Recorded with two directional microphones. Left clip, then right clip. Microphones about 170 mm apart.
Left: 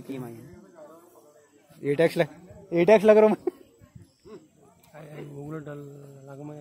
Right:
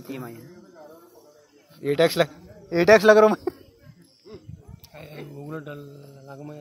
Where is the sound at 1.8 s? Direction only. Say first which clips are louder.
Right 3 dB; 20° left (ahead or behind).